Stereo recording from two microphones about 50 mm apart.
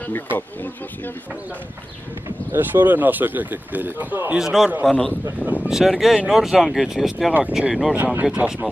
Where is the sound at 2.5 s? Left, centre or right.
Right.